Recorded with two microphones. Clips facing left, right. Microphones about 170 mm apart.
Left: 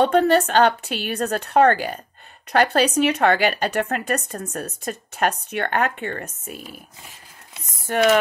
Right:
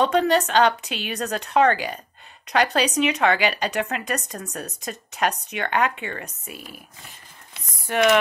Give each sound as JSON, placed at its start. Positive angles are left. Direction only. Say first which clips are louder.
{"t": 0.0, "sound": "a woman's voice", "louder": "left 3 dB", "side_deg": 45}
{"t": 6.5, "sound": "speech", "louder": "left 3 dB", "side_deg": 0}
{"t": 7.9, "sound": "a sound", "louder": "left 1 dB", "side_deg": 40}